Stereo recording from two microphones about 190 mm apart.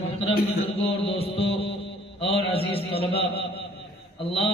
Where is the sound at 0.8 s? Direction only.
30° left (ahead or behind).